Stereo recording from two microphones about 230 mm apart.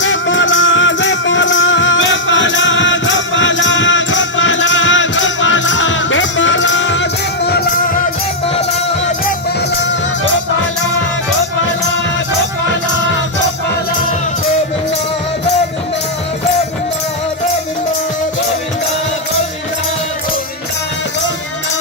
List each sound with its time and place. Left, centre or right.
0.0 s music: left